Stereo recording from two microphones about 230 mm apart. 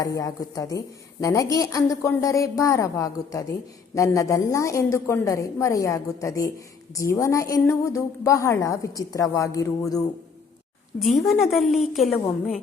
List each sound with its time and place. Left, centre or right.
0.0 s a woman's voice: centre
11.3 s a woman's voice: centre